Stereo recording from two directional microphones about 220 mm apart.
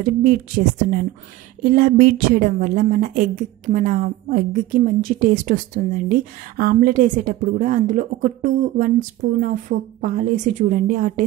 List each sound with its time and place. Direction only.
0.0 s a woman's voice: 35° right (ahead or behind)
1.6 s a woman's voice: 40° right (ahead or behind)